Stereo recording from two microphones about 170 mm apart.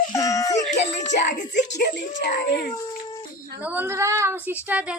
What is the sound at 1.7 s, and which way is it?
Speech, 85° left.